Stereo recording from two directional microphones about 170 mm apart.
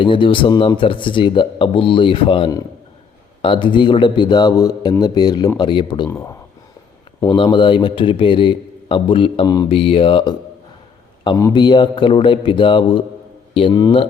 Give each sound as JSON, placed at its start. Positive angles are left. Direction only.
{"t": 0.0, "sound": "speech", "side_deg": 30}
{"t": 6.1, "sound": "speech", "side_deg": 15}
{"t": 7.3, "sound": "speech", "side_deg": 30}
{"t": 11.3, "sound": "speech", "side_deg": 20}